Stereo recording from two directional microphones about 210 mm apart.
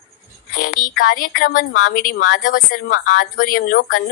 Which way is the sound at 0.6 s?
40° left (ahead or behind).